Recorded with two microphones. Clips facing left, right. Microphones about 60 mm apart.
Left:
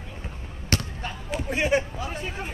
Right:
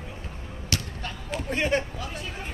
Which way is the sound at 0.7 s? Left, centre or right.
Left.